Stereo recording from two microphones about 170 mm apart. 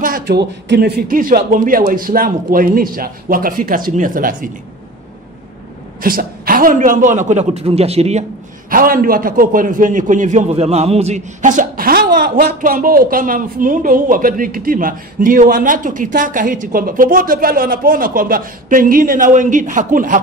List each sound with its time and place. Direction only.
0.0 s a man's voice: 65° right (ahead or behind)
5.9 s a man's voice: 55° right (ahead or behind); by 8.3 s 40° right (ahead or behind)
8.6 s a man's voice: 55° right (ahead or behind)